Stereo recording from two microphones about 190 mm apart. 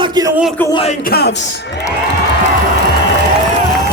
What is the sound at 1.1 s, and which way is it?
Speech, 55° left (ahead or behind).